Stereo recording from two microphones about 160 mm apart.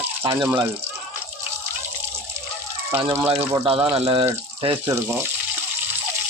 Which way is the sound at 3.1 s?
35° right (ahead or behind).